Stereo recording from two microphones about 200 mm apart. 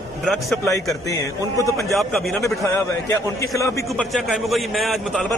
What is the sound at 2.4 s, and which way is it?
A man's voice, 15° left (ahead or behind).